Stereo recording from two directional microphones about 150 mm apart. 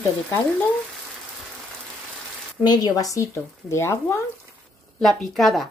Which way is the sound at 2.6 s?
25° left (ahead or behind).